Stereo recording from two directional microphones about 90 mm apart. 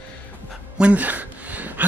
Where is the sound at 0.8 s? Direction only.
15° right (ahead or behind).